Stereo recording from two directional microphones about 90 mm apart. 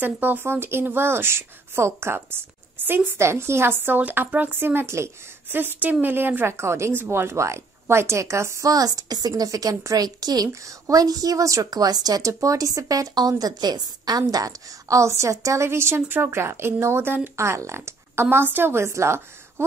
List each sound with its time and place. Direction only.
0.0 s a woman's voice: 20° right (ahead or behind)